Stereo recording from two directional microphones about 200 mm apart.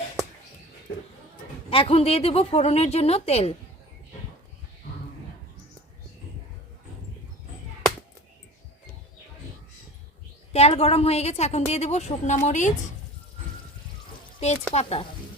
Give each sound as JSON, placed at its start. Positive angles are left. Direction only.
{"t": 1.7, "sound": "a woman's voice", "side_deg": 30}
{"t": 10.5, "sound": "a woman's voice", "side_deg": 30}
{"t": 14.3, "sound": "a woman's voice", "side_deg": 35}